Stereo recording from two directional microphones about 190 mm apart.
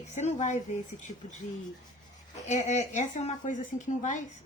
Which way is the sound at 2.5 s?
40° left (ahead or behind).